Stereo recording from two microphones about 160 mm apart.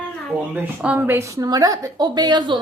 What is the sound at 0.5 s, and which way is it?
A woman's voice, 10° right (ahead or behind).